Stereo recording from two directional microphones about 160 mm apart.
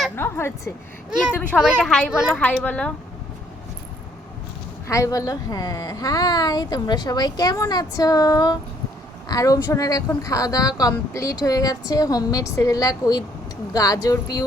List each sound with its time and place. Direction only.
0.2 s a woman's voice: 15° left (ahead or behind)
1.1 s speech: 5° right (ahead or behind)
2.3 s speech: 10° left (ahead or behind)
4.9 s a woman's voice: 20° left (ahead or behind)